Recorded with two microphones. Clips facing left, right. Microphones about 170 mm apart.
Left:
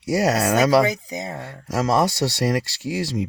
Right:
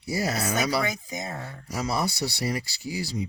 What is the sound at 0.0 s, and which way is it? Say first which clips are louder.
Speech: left 8 dB; 80° left.